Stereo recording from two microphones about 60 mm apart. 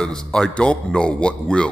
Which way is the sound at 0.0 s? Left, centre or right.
Centre.